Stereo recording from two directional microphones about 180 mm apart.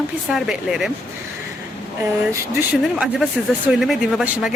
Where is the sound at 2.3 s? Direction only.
15° right (ahead or behind).